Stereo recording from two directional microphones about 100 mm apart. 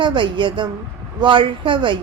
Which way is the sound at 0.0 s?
55° right (ahead or behind).